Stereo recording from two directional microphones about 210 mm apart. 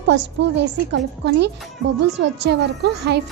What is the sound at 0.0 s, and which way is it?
A woman's voice, 60° right (ahead or behind).